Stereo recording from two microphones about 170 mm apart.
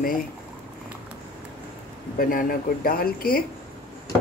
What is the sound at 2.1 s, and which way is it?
Speech, 55° left (ahead or behind).